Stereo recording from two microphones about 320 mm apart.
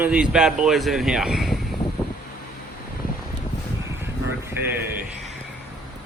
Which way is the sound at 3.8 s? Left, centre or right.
Centre.